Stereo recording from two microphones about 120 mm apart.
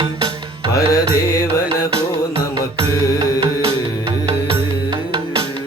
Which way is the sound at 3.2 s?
45° right (ahead or behind).